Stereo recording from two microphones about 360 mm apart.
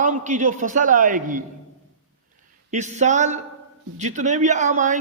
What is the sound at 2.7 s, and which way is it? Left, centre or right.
Speech, centre.